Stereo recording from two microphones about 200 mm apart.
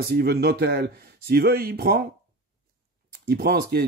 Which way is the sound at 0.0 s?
50° right (ahead or behind).